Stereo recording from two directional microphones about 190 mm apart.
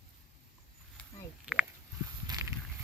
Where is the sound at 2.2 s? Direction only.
20° right (ahead or behind).